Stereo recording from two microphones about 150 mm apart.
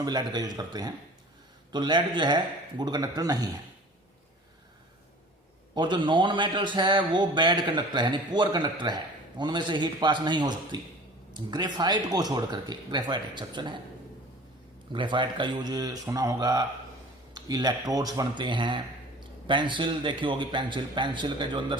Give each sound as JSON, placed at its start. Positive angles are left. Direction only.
{"t": 0.0, "sound": "speech", "side_deg": -25}
{"t": 5.7, "sound": "a man's voice", "side_deg": -30}
{"t": 14.9, "sound": "a man's voice", "side_deg": -30}